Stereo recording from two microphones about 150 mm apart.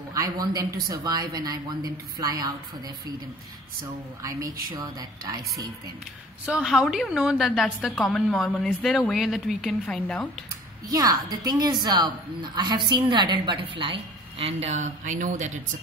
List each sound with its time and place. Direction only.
0.1 s a woman's voice: 25° right (ahead or behind)
4.2 s a woman's voice: 20° right (ahead or behind)
6.4 s a woman's voice: 5° right (ahead or behind)
10.9 s a woman's voice: 25° right (ahead or behind); by 15.5 s 55° right (ahead or behind)